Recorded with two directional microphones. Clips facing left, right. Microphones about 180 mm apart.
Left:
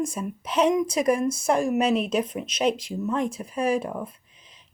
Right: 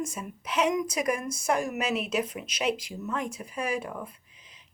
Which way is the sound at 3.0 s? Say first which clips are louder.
Left 7 dB; 30° left (ahead or behind).